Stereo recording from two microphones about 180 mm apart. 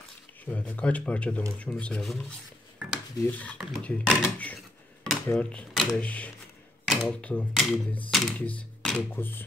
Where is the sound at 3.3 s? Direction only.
10° left (ahead or behind).